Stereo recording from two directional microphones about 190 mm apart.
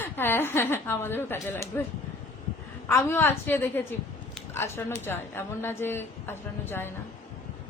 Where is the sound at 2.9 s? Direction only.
10° left (ahead or behind).